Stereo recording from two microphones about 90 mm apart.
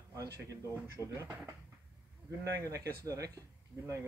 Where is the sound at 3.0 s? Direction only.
40° right (ahead or behind).